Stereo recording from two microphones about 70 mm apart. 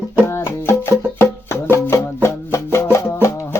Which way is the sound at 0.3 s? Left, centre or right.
Left.